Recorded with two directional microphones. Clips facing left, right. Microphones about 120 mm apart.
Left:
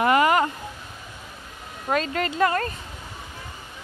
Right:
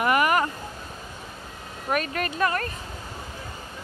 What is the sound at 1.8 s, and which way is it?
Speech, 25° left (ahead or behind).